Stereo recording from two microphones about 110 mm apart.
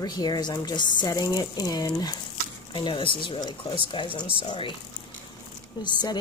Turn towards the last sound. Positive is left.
turn(degrees=40)  # may be behind; listen again after turning